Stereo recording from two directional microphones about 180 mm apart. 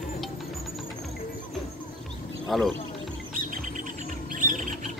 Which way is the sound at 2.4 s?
Centre (ahead or behind).